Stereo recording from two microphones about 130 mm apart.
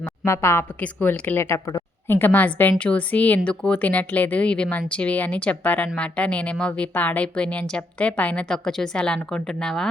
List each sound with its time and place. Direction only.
0.3 s a woman's voice: 20° left (ahead or behind)